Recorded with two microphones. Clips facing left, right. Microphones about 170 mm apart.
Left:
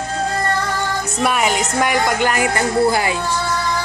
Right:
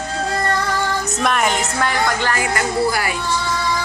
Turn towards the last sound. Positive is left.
turn(degrees=25)  # may be behind; listen again after turning